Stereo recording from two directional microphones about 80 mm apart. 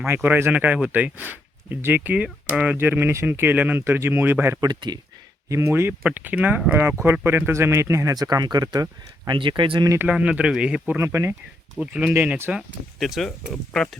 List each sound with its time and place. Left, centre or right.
0.0 s speech: right
2.7 s speech: right
4.6 s speech: right
5.5 s speech: right
6.0 s speech: centre
6.7 s speech: right
8.1 s speech: right
10.1 s speech: centre
10.9 s speech: right
11.8 s speech: centre
12.1 s speech: right
12.5 s speech: centre